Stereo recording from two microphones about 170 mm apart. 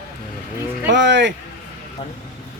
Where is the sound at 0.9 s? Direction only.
90° right.